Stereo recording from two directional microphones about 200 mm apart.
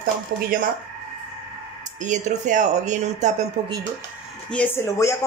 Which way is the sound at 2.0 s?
35° right (ahead or behind).